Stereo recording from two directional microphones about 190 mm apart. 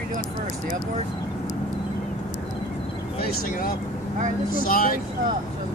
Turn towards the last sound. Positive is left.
turn(degrees=50)  # may be behind; listen again after turning